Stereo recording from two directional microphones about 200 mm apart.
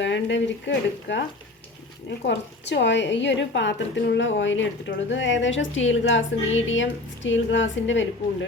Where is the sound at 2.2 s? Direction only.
60° left (ahead or behind).